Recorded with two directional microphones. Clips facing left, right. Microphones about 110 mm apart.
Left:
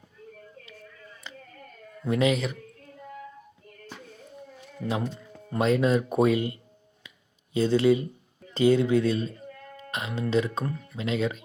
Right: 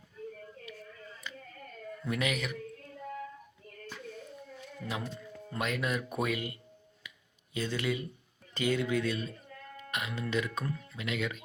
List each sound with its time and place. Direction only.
1.2 s a sound: 30° left (ahead or behind)
2.0 s speech: 30° left (ahead or behind)
3.8 s music: 25° left (ahead or behind)
7.5 s speech: 30° left (ahead or behind)